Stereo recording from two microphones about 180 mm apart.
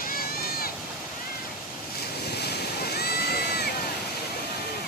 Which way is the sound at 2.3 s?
65° left (ahead or behind).